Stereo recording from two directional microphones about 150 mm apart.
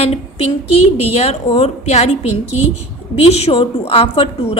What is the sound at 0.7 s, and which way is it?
A woman's voice, 40° left (ahead or behind).